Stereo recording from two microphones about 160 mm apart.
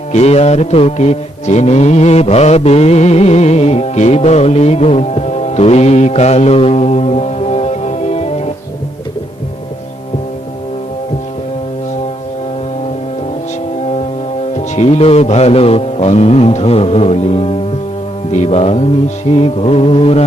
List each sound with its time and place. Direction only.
0.1 s mantra: 40° left (ahead or behind)
14.5 s a man's voice: 40° left (ahead or behind)